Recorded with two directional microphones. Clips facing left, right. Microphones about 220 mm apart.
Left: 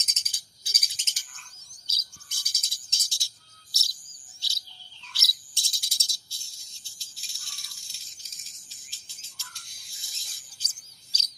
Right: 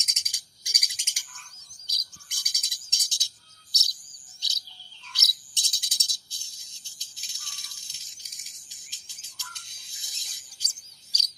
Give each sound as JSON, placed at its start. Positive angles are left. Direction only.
{"t": 0.0, "sound": "a sound", "side_deg": -15}
{"t": 1.9, "sound": "chirp", "side_deg": -15}
{"t": 5.1, "sound": "cricket", "side_deg": -20}